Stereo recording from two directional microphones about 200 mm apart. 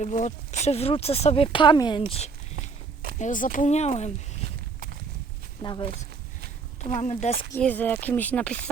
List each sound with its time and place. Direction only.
0.0 s speech: 35° left (ahead or behind)
2.6 s walk: 50° right (ahead or behind)
3.2 s speech: 40° left (ahead or behind)
5.6 s speech: 25° left (ahead or behind)
6.9 s speech: 35° left (ahead or behind)
7.5 s speech: 10° left (ahead or behind)